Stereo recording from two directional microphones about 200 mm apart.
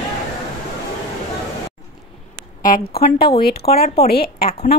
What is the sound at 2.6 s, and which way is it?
Speech, 45° left (ahead or behind).